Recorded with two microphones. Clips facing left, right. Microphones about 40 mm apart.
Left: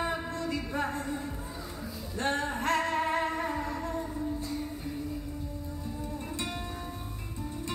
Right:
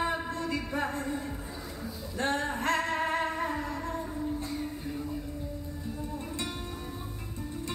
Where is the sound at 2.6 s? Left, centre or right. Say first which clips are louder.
Left 2 dB; right.